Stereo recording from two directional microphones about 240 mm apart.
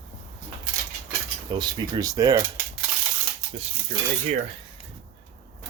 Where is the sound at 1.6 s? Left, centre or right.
Centre.